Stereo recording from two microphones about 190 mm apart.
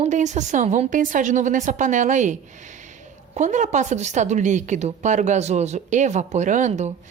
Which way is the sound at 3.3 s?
40° right (ahead or behind).